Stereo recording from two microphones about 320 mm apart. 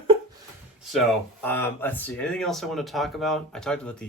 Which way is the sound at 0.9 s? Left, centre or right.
Centre.